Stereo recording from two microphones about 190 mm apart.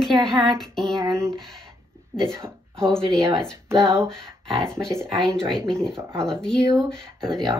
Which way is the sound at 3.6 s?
15° right (ahead or behind).